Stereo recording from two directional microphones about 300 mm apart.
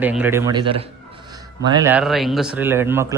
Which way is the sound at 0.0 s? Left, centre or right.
Centre.